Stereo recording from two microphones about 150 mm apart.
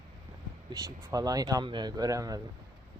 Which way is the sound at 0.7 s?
25° right (ahead or behind).